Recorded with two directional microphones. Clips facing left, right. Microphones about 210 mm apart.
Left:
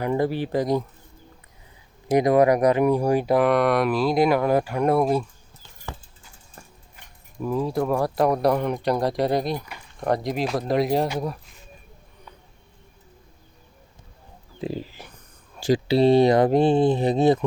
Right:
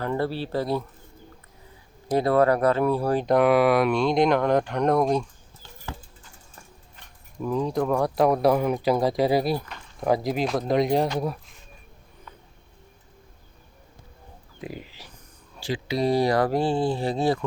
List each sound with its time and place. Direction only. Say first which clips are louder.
0.0 s speech: left 3 dB; 15° left (ahead or behind)
2.0 s speech: left 3 dB; 15° left (ahead or behind)
6.9 s speech: even; 5° left (ahead or behind)
14.6 s speech: left 7 dB; 30° left (ahead or behind)
15.6 s speech: left 8 dB; 40° left (ahead or behind)
16.0 s speech: left 5 dB; 25° left (ahead or behind)